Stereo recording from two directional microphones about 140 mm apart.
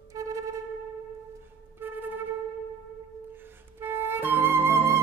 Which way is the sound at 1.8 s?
15° right (ahead or behind).